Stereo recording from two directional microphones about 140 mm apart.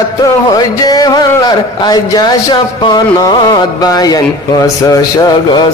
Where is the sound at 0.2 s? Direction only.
30° left (ahead or behind).